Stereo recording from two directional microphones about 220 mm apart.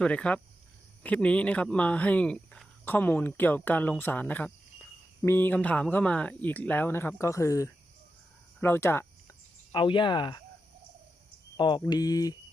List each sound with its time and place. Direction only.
0.0 s speech: 5° left (ahead or behind)
9.7 s speech: 20° left (ahead or behind)
11.5 s speech: 20° left (ahead or behind)